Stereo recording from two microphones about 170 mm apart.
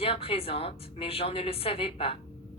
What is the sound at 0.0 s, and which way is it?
A woman's voice, 35° left (ahead or behind).